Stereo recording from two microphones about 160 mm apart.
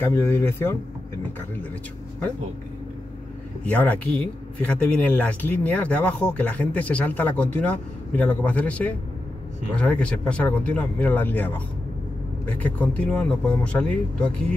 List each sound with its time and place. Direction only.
0.0 s speech: 15° left (ahead or behind)
3.6 s speech: 10° left (ahead or behind)